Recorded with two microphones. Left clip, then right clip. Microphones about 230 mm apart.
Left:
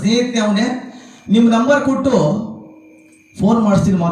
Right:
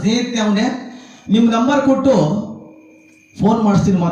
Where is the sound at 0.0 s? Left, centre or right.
Centre.